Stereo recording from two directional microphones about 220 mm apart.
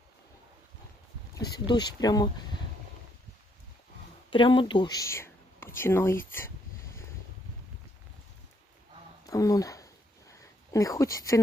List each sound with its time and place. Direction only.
1.5 s speech: 20° left (ahead or behind)
4.3 s speech: 25° left (ahead or behind)
9.2 s a sound: 15° left (ahead or behind)